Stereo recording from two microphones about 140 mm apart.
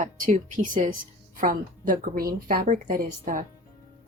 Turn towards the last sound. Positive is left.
turn(degrees=-75)  # may be behind; listen again after turning